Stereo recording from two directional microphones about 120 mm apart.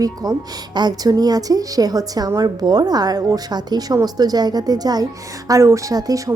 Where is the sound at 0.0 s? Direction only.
30° right (ahead or behind).